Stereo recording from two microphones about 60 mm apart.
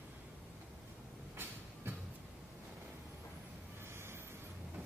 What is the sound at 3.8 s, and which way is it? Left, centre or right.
Vehicle, right.